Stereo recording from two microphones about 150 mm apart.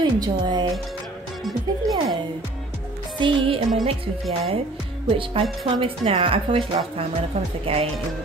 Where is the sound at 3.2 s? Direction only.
35° right (ahead or behind).